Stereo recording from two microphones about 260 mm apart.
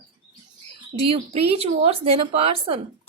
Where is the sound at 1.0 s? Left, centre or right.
Right.